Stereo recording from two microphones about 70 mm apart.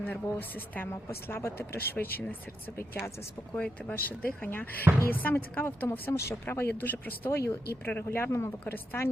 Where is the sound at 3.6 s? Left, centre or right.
Left.